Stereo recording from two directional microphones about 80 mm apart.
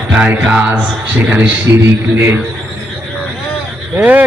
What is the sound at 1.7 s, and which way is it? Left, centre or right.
Speech, right.